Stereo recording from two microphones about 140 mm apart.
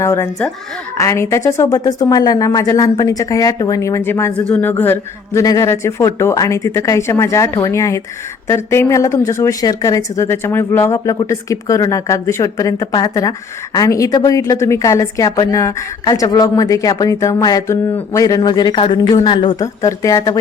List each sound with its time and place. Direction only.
0.0 s a woman's voice: 20° left (ahead or behind); by 19.6 s 35° left (ahead or behind)
19.6 s a woman's voice: 25° left (ahead or behind)